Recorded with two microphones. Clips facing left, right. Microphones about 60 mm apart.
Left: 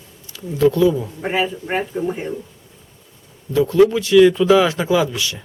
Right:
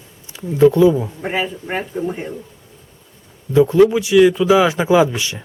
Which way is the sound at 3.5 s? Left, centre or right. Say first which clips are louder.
Right 2 dB; right.